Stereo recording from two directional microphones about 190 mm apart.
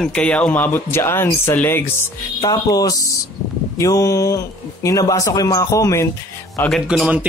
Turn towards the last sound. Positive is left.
turn(degrees=-5)  # may be behind; listen again after turning